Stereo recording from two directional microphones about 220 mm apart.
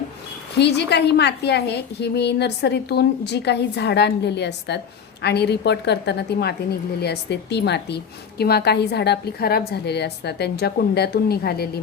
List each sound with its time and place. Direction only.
0.6 s a woman's voice: 50° left (ahead or behind)